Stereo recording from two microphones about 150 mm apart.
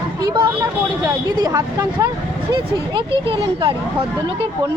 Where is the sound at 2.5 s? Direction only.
35° right (ahead or behind).